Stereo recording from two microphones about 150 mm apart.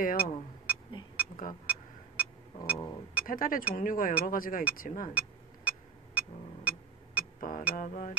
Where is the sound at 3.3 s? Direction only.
70° left (ahead or behind).